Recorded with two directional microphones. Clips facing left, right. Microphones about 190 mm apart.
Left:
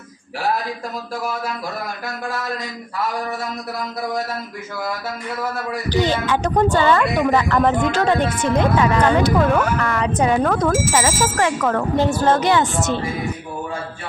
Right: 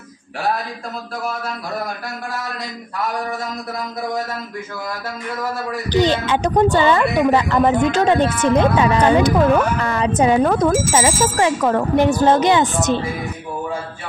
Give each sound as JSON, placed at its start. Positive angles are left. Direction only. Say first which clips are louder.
{"t": 5.9, "sound": "speech", "louder": "right 2 dB", "side_deg": -20}